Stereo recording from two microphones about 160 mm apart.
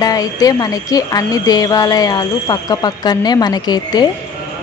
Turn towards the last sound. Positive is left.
turn(degrees=25)  # may be behind; listen again after turning